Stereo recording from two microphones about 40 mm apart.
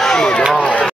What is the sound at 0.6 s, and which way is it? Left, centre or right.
Run, left.